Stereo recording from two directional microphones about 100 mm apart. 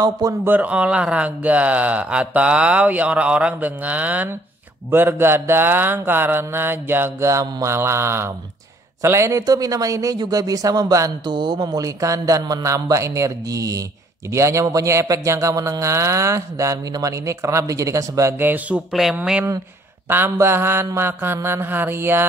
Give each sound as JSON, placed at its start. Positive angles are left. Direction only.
{"t": 0.0, "sound": "a man's voice", "side_deg": -40}
{"t": 0.5, "sound": "speech", "side_deg": -15}
{"t": 4.9, "sound": "mantra", "side_deg": -20}
{"t": 9.0, "sound": "a man's voice", "side_deg": -30}
{"t": 18.4, "sound": "mantra", "side_deg": -20}
{"t": 18.9, "sound": "speech", "side_deg": -5}
{"t": 19.1, "sound": "speech", "side_deg": -15}
{"t": 20.1, "sound": "mantra", "side_deg": -20}